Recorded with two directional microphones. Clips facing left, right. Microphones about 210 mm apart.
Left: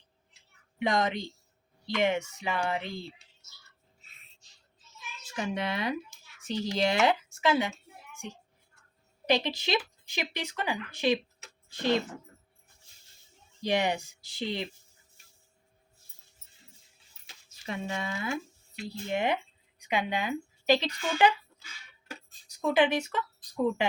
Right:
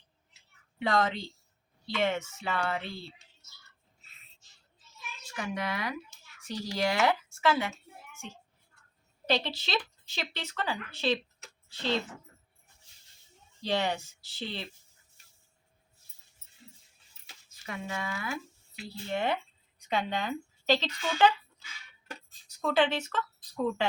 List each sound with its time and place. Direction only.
0.8 s speech: 15° left (ahead or behind)
4.0 s music: centre (ahead or behind)
5.3 s speech: 25° left (ahead or behind)
9.2 s speech: 15° left (ahead or behind)
13.6 s speech: 15° left (ahead or behind)
17.7 s speech: 20° left (ahead or behind)
22.6 s speech: 15° left (ahead or behind)